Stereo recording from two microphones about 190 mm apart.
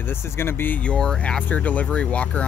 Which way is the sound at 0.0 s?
10° left (ahead or behind).